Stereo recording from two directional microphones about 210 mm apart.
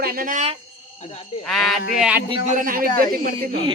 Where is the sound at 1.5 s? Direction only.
Centre (ahead or behind).